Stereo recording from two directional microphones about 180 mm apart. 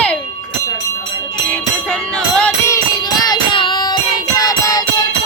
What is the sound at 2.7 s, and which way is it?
Music, 20° left (ahead or behind).